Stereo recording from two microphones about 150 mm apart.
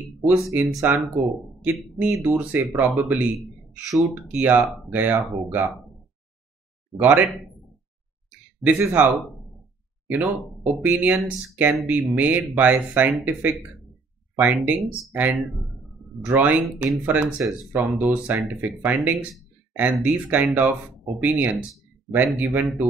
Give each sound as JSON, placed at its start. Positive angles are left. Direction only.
{"t": 0.2, "sound": "speech", "side_deg": -20}
{"t": 2.0, "sound": "speech", "side_deg": -15}
{"t": 3.3, "sound": "a man's voice", "side_deg": 0}
{"t": 4.1, "sound": "speech", "side_deg": -10}
{"t": 4.6, "sound": "speech", "side_deg": 0}
{"t": 4.9, "sound": "speech", "side_deg": -10}
{"t": 7.0, "sound": "speech", "side_deg": -10}
{"t": 8.5, "sound": "speech", "side_deg": -10}